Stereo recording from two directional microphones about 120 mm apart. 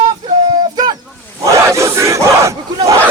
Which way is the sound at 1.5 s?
25° right (ahead or behind).